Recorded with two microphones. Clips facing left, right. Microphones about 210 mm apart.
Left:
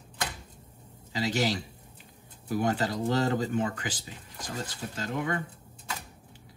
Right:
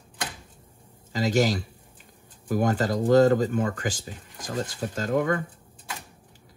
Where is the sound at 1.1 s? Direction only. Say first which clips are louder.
Right 5 dB; 40° right (ahead or behind).